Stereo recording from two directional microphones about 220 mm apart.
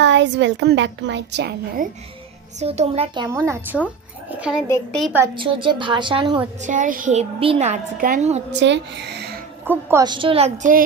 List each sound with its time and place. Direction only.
0.0 s a woman's voice: 55° right (ahead or behind)
2.6 s a woman's voice: 30° right (ahead or behind)
3.3 s a woman's voice: 10° right (ahead or behind)
5.1 s a woman's voice: 15° right (ahead or behind)
6.6 s a child's voice: 35° right (ahead or behind)
8.5 s a woman's voice: 50° right (ahead or behind)
9.6 s a woman's voice: 15° right (ahead or behind); by 10.8 s 35° right (ahead or behind)